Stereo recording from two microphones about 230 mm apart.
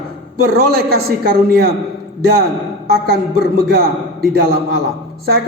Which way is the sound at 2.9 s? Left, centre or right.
Right.